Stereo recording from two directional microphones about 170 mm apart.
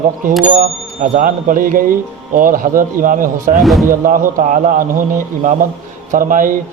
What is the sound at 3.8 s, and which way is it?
A man's voice, 50° right (ahead or behind).